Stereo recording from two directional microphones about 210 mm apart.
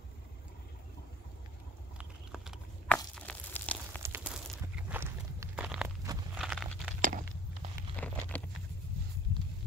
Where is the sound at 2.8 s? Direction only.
5° left (ahead or behind).